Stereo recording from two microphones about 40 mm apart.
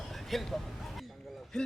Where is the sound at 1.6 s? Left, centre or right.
Centre.